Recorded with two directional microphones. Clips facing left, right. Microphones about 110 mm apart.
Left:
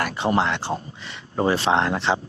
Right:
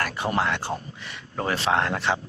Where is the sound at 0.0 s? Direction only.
25° left (ahead or behind).